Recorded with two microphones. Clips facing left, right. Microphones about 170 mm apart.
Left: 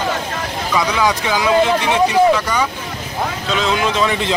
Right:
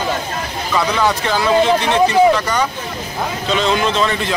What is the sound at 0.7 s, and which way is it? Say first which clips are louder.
Speech: right 1 dB; 10° left (ahead or behind).